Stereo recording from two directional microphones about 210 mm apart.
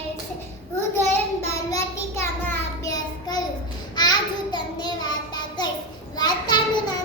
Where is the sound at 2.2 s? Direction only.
15° left (ahead or behind).